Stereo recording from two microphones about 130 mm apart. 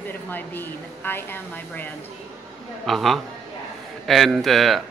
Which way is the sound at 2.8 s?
Centre (ahead or behind).